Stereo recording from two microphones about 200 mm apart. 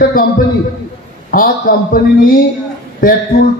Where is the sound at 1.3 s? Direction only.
45° left (ahead or behind).